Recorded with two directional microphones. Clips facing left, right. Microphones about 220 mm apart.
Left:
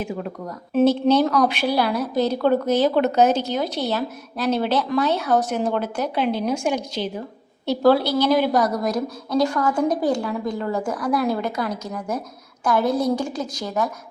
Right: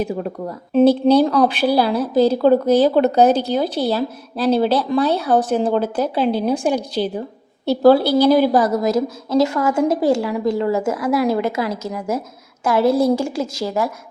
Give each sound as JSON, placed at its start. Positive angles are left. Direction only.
{"t": 0.0, "sound": "a woman's voice", "side_deg": -35}
{"t": 10.7, "sound": "speech", "side_deg": -5}
{"t": 11.6, "sound": "a woman's voice", "side_deg": -25}
{"t": 11.9, "sound": "speech", "side_deg": -5}
{"t": 12.6, "sound": "a woman's voice", "side_deg": -25}